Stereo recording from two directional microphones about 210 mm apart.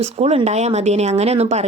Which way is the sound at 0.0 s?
30° right (ahead or behind).